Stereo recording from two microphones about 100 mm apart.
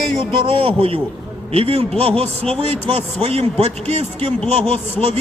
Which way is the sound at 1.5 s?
80° right.